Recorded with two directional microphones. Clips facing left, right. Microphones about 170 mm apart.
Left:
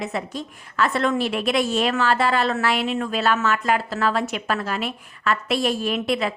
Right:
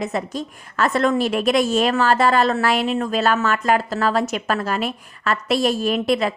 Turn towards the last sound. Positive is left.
turn(degrees=-40)  # may be behind; listen again after turning